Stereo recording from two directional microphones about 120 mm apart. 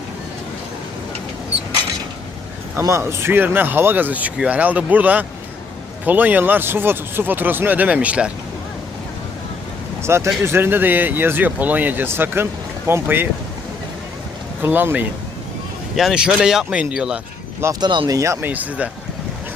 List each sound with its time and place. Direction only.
2.8 s speech: 25° right (ahead or behind)
10.0 s speech: 20° right (ahead or behind)
14.6 s speech: 15° right (ahead or behind)
16.0 s speech: 5° right (ahead or behind)
17.7 s speech: 40° right (ahead or behind)
18.2 s speech: 25° right (ahead or behind)
18.5 s speech: 15° right (ahead or behind)